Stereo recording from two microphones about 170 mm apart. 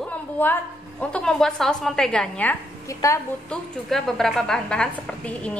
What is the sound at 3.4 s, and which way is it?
A woman's voice, centre (ahead or behind).